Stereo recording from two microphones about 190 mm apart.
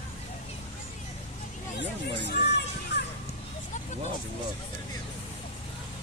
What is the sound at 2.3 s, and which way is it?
Music, 60° left (ahead or behind).